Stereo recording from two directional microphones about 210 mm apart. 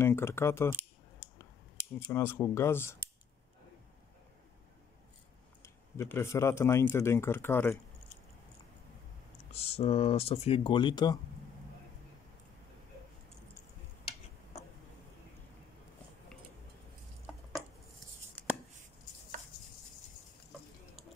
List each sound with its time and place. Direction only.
0.0 s speech: 10° left (ahead or behind)
2.0 s speech: 10° left (ahead or behind)
5.6 s speech: 10° left (ahead or behind)
9.5 s speech: 30° left (ahead or behind)